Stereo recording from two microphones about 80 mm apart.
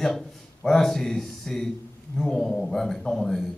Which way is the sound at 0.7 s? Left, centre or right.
Centre.